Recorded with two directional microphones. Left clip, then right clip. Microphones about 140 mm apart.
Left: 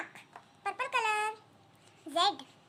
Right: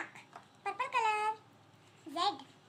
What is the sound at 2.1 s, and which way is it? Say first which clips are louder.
Speech: left 5 dB; 40° left (ahead or behind).